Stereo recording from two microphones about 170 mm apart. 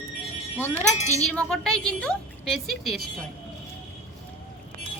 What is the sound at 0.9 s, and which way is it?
Speech, 40° left (ahead or behind).